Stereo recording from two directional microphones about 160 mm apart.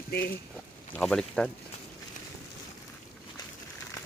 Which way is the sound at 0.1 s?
80° left.